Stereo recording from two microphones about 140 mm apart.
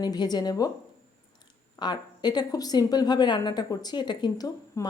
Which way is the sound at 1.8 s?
30° left (ahead or behind).